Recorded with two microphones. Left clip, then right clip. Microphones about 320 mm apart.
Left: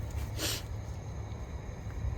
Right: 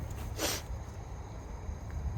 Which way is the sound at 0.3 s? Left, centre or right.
Centre.